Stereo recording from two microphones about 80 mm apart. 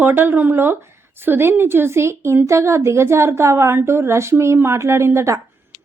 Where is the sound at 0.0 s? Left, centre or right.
Right.